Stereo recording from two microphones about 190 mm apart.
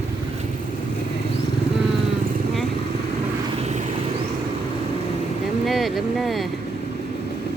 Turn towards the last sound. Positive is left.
turn(degrees=0)  # may be behind; listen again after turning